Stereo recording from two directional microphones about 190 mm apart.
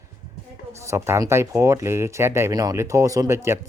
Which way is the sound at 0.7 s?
15° right (ahead or behind).